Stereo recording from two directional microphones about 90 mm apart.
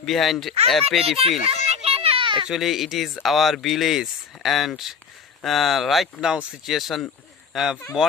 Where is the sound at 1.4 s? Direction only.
90° right; by 2.5 s 65° right (ahead or behind).